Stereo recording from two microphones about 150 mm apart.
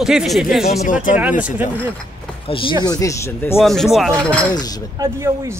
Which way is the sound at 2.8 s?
25° left (ahead or behind).